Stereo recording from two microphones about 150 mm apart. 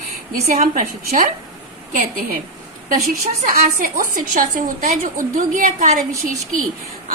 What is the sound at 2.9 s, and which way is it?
A woman's voice, 70° right (ahead or behind).